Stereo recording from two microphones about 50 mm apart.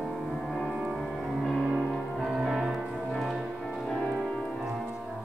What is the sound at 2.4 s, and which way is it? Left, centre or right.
Music, centre.